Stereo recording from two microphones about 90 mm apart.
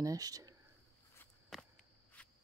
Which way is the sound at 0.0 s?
40° right (ahead or behind).